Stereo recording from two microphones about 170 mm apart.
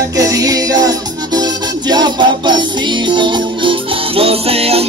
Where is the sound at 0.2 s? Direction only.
20° right (ahead or behind).